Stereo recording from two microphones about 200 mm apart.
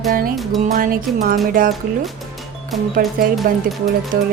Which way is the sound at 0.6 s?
45° right (ahead or behind).